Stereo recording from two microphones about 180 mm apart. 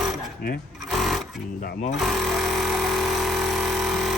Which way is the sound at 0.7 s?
Centre (ahead or behind).